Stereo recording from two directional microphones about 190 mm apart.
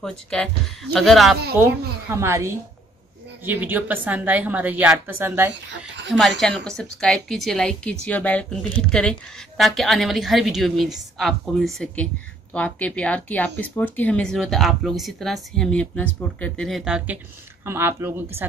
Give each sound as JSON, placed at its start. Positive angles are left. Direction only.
{"t": 0.0, "sound": "a woman's voice", "side_deg": 5}
{"t": 1.6, "sound": "a woman's voice", "side_deg": -10}
{"t": 5.5, "sound": "speech", "side_deg": -65}
{"t": 6.4, "sound": "a woman's voice", "side_deg": 5}